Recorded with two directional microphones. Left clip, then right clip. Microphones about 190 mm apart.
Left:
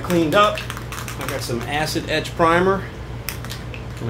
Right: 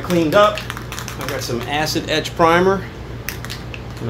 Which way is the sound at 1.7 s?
20° right (ahead or behind).